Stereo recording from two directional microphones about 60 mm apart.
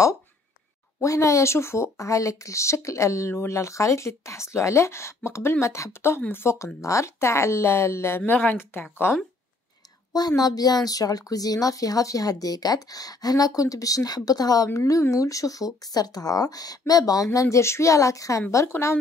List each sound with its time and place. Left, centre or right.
1.0 s speech: left
6.8 s speech: left
8.3 s speech: left
10.1 s a woman's voice: left
14.9 s speech: left
18.7 s speech: left